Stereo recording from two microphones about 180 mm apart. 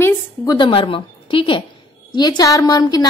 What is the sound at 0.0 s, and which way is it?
A woman's voice, 25° left (ahead or behind).